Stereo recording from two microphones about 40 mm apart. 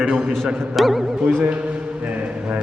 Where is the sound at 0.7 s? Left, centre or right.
Centre.